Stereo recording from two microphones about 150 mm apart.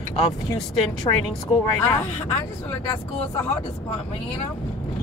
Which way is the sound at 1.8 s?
15° left (ahead or behind).